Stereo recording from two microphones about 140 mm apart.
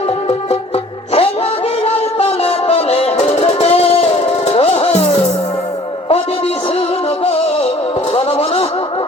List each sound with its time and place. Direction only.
1.8 s music: 45° left (ahead or behind)
8.1 s music: 45° left (ahead or behind)